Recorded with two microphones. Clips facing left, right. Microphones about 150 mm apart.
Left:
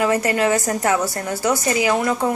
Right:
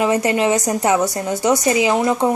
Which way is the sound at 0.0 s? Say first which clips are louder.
Right 2 dB; 20° right (ahead or behind).